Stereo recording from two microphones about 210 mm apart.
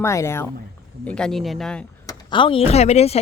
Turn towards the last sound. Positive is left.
turn(degrees=30)  # may be behind; listen again after turning